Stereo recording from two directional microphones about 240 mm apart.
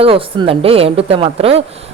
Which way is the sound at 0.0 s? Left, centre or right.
Right.